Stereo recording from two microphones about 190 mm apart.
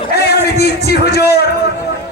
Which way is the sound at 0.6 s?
55° left (ahead or behind).